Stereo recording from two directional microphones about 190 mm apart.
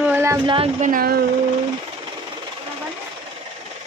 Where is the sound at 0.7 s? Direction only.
45° right (ahead or behind).